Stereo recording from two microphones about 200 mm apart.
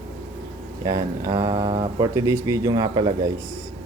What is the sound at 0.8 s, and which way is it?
Speech, 20° right (ahead or behind).